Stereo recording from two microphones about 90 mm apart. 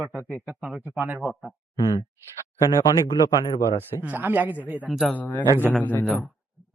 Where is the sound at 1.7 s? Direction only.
50° left (ahead or behind).